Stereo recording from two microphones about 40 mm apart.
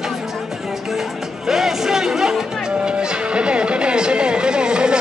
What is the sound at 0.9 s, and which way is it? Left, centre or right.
Music, centre.